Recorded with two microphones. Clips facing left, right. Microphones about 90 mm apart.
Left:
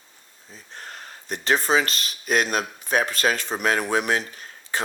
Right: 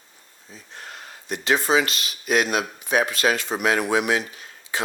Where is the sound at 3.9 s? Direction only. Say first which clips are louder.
Right 1 dB; 40° left (ahead or behind).